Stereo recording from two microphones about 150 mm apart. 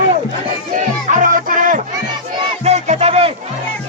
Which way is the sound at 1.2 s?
65° right (ahead or behind).